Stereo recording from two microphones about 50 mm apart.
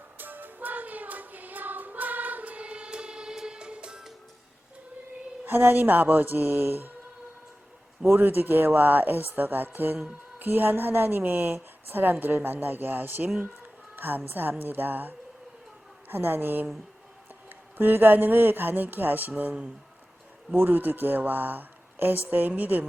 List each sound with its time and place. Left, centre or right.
0.2 s music: right; by 4.0 s centre
5.5 s speech: right
8.0 s a woman's voice: right
13.9 s a sound: right
14.6 s a woman's voice: right
17.7 s speech: right
20.6 s speech: right